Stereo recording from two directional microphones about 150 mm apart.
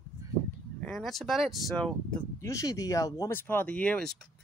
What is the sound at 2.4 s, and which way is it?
Speech, 20° left (ahead or behind).